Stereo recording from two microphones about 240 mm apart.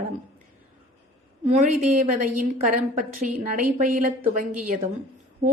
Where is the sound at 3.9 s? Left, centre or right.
Right.